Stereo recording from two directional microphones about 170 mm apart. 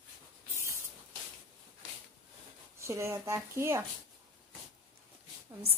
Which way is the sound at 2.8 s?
15° right (ahead or behind).